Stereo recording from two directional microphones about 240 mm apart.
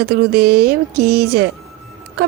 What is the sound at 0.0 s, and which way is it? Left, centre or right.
A woman's voice, right.